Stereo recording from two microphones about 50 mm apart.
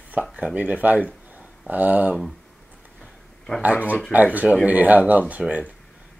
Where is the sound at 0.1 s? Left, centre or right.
Right.